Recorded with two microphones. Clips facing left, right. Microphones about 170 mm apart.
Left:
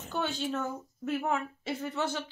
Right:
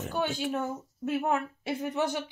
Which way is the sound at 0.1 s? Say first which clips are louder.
Right 1 dB; 10° right (ahead or behind).